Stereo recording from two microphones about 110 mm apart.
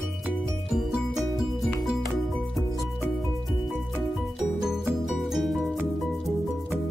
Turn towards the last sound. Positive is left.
turn(degrees=0)  # may be behind; listen again after turning